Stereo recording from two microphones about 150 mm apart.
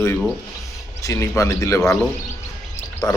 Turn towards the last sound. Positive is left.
turn(degrees=25)  # may be behind; listen again after turning